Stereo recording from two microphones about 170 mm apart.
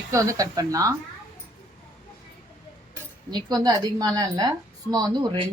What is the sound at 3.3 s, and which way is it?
A woman's voice, 20° right (ahead or behind).